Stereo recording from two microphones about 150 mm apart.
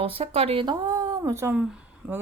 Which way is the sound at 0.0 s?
40° right (ahead or behind).